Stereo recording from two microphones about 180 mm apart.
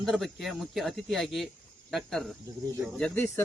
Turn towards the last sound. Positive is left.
turn(degrees=5)  # may be behind; listen again after turning